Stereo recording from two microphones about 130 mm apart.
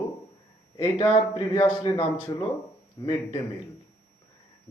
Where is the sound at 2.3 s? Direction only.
30° left (ahead or behind).